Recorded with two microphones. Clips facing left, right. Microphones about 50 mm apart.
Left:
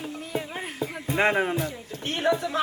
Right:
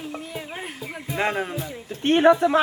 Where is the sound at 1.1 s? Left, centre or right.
Left.